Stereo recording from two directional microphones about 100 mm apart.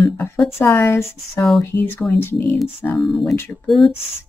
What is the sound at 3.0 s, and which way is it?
Speech, centre (ahead or behind).